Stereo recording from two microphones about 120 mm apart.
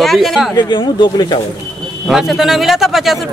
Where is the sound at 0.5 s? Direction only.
40° left (ahead or behind).